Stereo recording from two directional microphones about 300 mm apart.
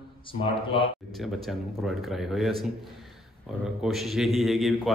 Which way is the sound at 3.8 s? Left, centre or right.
Centre.